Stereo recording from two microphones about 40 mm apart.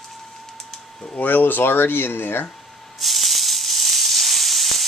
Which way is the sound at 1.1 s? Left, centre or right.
Left.